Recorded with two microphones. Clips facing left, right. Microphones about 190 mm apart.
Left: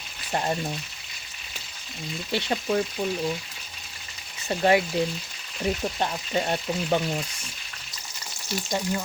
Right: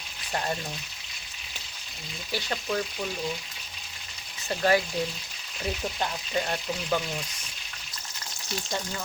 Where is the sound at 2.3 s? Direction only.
25° left (ahead or behind).